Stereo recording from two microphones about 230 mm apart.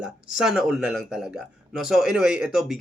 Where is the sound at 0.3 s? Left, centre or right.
Centre.